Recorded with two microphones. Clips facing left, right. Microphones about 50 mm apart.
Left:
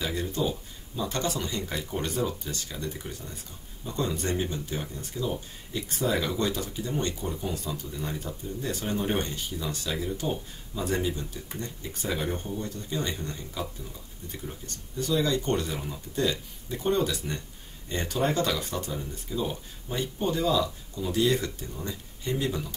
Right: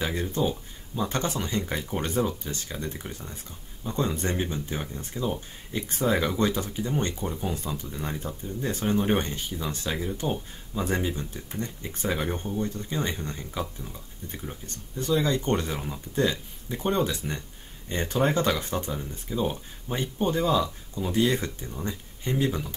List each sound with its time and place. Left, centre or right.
0.0 s speech: right
14.7 s speech: right
18.9 s speech: centre
19.4 s speech: right